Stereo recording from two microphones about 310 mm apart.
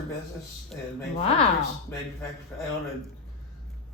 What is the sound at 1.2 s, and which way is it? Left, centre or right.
Speech, centre.